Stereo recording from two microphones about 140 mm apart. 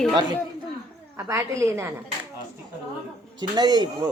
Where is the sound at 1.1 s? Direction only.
20° right (ahead or behind).